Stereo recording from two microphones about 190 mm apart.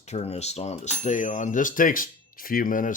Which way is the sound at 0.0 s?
35° left (ahead or behind).